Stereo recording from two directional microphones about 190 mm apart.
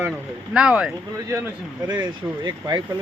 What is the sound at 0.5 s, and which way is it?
Speech, 5° right (ahead or behind).